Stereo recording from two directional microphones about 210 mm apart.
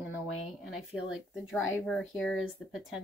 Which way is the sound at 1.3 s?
Centre (ahead or behind).